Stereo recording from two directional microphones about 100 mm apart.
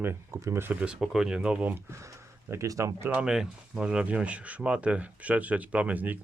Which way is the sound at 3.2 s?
5° right (ahead or behind).